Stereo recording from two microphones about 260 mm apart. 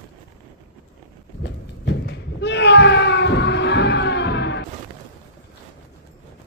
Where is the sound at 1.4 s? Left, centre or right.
Left.